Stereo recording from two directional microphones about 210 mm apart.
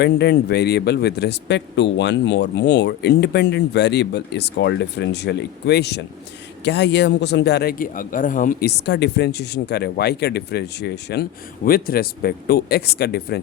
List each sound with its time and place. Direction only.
0.0 s speech: 50° left (ahead or behind)